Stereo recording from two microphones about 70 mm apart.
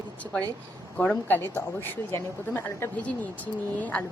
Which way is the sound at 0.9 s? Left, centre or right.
Centre.